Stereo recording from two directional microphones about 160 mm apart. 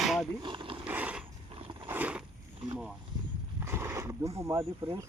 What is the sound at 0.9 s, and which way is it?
Pulleys, 10° right (ahead or behind).